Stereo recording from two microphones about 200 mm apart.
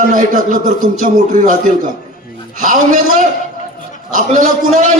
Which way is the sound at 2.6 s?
40° right (ahead or behind).